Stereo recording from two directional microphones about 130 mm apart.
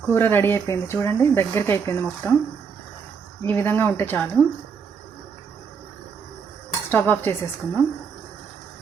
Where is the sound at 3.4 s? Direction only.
15° left (ahead or behind).